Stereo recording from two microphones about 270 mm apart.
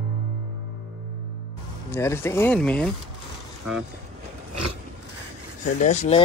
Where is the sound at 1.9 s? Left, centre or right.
Centre.